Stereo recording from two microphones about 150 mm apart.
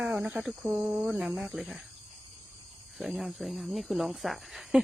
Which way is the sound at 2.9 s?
Centre (ahead or behind).